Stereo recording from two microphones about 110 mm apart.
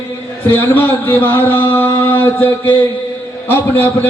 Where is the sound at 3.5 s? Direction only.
15° left (ahead or behind).